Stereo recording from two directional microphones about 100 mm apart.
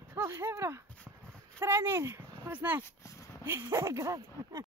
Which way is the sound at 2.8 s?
30° left (ahead or behind).